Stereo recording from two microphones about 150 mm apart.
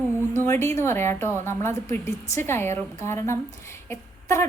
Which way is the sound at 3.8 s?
20° left (ahead or behind).